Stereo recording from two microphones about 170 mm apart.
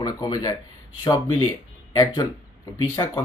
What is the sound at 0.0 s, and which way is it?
Speech, 20° left (ahead or behind).